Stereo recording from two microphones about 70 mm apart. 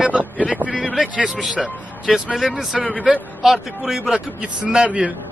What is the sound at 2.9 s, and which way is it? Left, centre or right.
Speech, centre.